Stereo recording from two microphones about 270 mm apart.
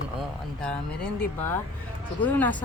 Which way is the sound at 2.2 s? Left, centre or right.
Centre.